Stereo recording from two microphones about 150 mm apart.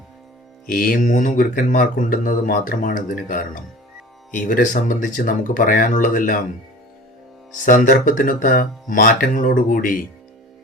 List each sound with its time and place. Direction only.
0.7 s speech: 70° left (ahead or behind)
7.6 s speech: 60° left (ahead or behind)